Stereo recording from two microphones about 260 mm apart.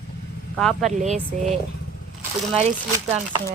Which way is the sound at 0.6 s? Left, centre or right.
Centre.